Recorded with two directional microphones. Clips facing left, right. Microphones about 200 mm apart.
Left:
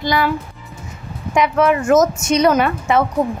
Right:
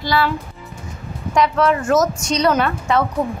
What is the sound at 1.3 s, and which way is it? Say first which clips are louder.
A woman's voice: left 1 dB; 15° left (ahead or behind).